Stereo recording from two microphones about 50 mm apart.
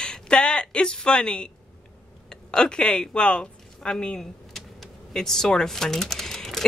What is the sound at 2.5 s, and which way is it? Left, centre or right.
Speech, centre.